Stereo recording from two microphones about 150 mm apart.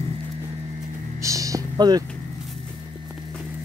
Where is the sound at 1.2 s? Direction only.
20° right (ahead or behind).